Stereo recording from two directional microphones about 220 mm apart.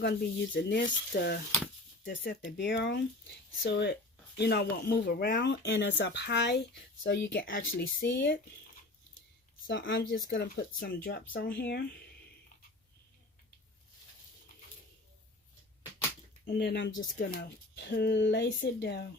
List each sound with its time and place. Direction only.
0.0 s speech: 50° left (ahead or behind)
9.6 s speech: 50° left (ahead or behind)
16.5 s speech: 45° left (ahead or behind)